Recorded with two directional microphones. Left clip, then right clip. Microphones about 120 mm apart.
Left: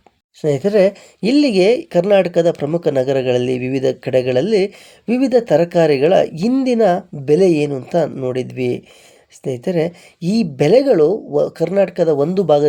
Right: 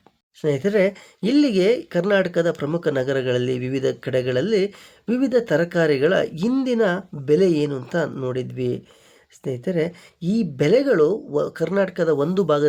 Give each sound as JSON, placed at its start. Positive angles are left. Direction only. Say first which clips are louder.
{"t": 0.4, "sound": "speech", "louder": "left 6 dB", "side_deg": 20}